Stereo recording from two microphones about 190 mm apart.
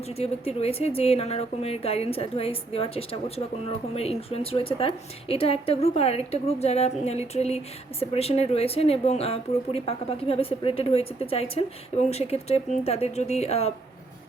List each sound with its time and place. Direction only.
0.2 s a woman's voice: 30° left (ahead or behind)